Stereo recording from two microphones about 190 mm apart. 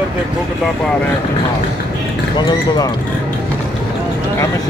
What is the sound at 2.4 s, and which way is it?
Speech, 20° left (ahead or behind).